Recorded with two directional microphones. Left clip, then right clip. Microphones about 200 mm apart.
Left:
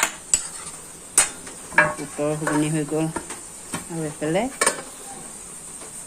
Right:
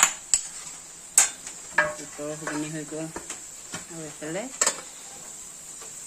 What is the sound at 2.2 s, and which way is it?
Speech, 20° left (ahead or behind).